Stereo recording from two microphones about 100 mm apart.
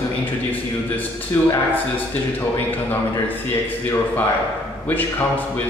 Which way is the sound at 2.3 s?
20° left (ahead or behind).